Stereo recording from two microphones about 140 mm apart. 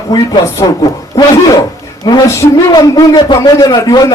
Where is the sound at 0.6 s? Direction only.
25° left (ahead or behind).